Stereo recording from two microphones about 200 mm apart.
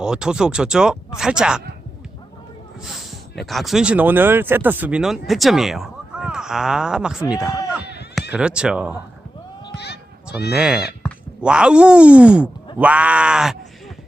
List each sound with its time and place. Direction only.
0.0 s speech: 5° right (ahead or behind)
2.8 s speech: centre (ahead or behind)
9.7 s run: 55° left (ahead or behind)
10.5 s speech: 5° right (ahead or behind)